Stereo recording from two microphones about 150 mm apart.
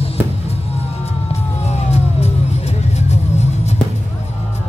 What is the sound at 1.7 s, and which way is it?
Music, 45° left (ahead or behind).